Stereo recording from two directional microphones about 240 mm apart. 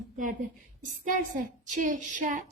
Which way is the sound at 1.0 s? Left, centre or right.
Right.